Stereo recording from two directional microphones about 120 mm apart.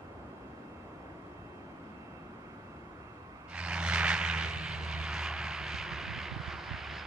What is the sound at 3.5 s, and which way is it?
Vehicle, 10° right (ahead or behind).